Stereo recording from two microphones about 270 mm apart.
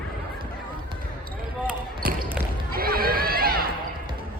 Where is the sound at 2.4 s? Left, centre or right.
Right.